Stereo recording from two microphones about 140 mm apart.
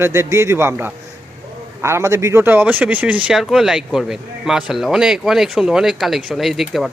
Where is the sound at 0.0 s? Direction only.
20° right (ahead or behind).